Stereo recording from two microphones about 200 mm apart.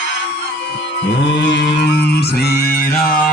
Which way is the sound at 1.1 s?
60° left (ahead or behind).